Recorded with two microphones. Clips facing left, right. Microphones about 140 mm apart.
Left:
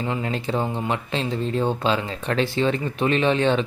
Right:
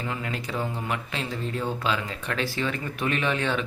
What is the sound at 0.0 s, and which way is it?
Speech, 30° left (ahead or behind).